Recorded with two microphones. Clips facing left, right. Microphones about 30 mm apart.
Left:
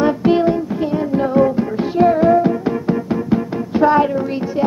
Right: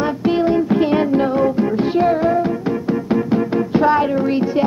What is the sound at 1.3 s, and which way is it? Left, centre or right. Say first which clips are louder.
Music: left 1 dB; centre.